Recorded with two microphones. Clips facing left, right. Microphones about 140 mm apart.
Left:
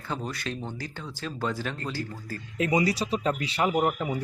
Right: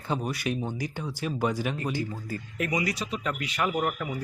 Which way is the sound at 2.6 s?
30° left (ahead or behind).